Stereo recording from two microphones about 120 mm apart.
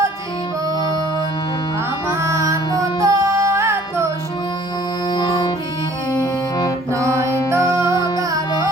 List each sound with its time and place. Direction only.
2.0 s music: 25° right (ahead or behind)
5.1 s music: 35° left (ahead or behind)
6.6 s music: 25° left (ahead or behind)
7.2 s music: 25° right (ahead or behind)
7.9 s music: 35° left (ahead or behind)